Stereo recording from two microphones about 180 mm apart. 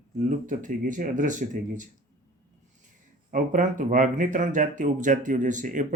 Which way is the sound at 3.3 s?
45° right (ahead or behind).